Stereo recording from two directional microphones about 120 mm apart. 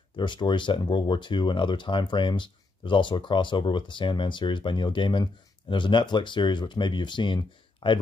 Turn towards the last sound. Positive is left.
turn(degrees=45)  # may be behind; listen again after turning